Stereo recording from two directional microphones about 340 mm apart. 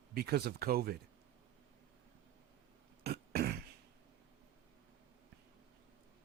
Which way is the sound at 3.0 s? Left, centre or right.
Right.